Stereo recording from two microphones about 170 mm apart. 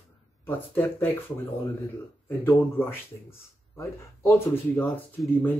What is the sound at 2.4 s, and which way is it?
Speech, 15° left (ahead or behind).